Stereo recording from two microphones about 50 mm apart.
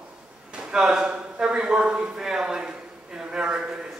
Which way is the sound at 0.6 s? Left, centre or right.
Centre.